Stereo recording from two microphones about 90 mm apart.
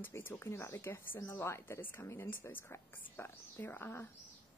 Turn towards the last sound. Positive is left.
turn(degrees=25)  # may be behind; listen again after turning